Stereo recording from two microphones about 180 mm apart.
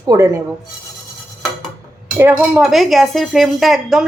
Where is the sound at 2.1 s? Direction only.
10° right (ahead or behind).